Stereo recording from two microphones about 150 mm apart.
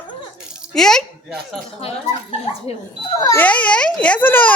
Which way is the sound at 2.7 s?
45° left (ahead or behind).